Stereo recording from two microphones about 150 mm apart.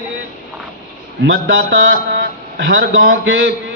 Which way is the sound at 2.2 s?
85° right.